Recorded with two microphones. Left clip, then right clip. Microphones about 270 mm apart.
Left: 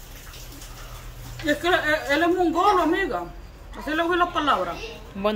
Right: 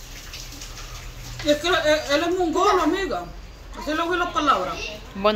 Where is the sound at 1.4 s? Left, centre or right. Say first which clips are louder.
Right 2 dB; left.